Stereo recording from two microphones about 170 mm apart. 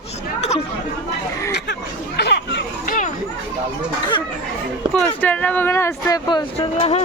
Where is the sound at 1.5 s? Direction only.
80° left.